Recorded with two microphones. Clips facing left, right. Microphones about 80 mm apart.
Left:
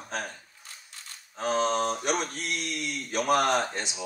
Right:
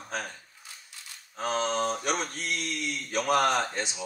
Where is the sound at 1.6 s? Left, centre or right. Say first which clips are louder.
Left 2 dB; left.